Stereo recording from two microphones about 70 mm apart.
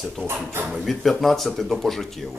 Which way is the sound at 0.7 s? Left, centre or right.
Centre.